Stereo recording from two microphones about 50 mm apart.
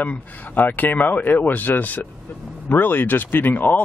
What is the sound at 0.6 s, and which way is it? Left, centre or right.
Speech, left.